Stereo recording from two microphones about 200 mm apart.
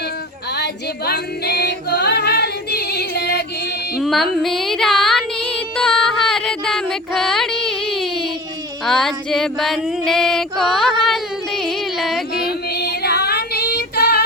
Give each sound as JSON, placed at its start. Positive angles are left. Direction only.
{"t": 0.5, "sound": "a capella", "side_deg": 55}
{"t": 4.0, "sound": "music", "side_deg": 0}
{"t": 8.8, "sound": "female singing", "side_deg": 0}
{"t": 12.3, "sound": "female singing", "side_deg": 50}